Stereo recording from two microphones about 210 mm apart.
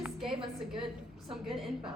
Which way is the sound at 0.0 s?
Centre (ahead or behind).